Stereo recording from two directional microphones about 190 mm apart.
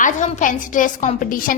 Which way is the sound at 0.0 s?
40° left (ahead or behind).